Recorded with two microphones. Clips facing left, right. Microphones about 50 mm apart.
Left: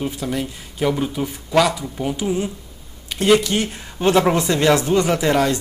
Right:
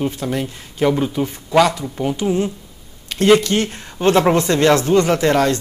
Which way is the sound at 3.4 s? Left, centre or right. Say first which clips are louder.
Right 3 dB; centre.